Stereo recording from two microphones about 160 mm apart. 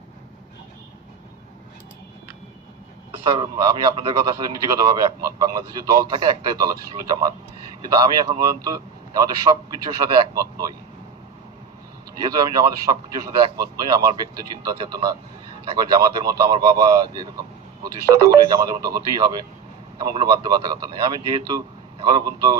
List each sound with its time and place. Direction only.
3.3 s a man's voice: 25° right (ahead or behind)
12.2 s a man's voice: 25° right (ahead or behind)
18.5 s a man's voice: 25° right (ahead or behind)